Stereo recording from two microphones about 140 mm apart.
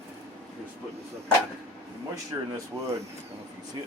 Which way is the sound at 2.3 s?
20° right (ahead or behind).